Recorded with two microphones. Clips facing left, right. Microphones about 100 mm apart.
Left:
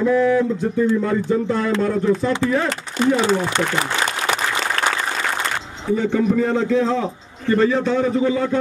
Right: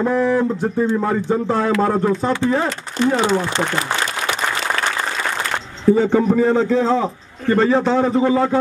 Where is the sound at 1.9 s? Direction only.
40° right (ahead or behind).